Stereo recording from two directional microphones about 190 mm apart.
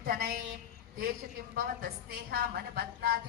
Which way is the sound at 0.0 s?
55° right (ahead or behind).